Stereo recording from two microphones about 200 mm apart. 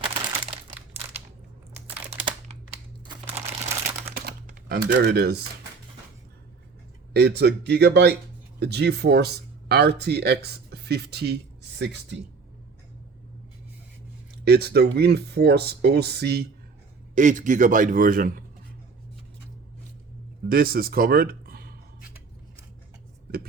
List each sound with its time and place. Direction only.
0.0 s crumpling: 25° right (ahead or behind)
2.2 s crumpling: 25° right (ahead or behind)
4.3 s speech: 50° right (ahead or behind)
7.1 s speech: 55° right (ahead or behind)
14.4 s speech: 55° right (ahead or behind)
17.2 s a man's voice: 40° right (ahead or behind)
20.5 s speech: 45° right (ahead or behind)